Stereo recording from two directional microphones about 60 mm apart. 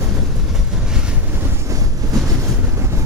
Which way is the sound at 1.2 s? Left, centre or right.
Right.